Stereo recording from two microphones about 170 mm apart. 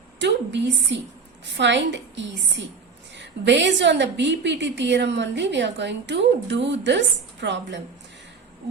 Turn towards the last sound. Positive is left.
turn(degrees=-90)